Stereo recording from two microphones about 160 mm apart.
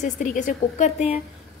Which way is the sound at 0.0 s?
55° left (ahead or behind).